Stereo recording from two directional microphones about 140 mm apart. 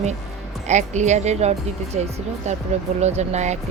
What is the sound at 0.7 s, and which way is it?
A woman's voice, 55° right (ahead or behind).